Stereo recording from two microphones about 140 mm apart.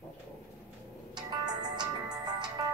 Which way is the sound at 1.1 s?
30° right (ahead or behind).